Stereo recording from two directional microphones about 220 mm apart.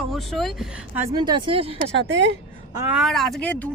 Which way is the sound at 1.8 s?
55° right (ahead or behind).